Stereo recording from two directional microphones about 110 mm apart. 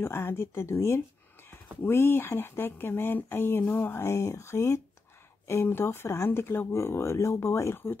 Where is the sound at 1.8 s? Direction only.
20° left (ahead or behind).